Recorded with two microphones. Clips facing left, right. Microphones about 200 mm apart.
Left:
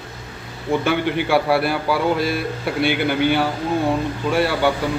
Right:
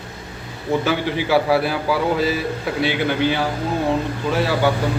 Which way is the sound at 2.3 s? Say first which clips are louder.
Even; 65° left (ahead or behind).